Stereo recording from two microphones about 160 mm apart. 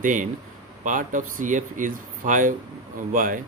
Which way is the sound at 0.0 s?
55° right (ahead or behind).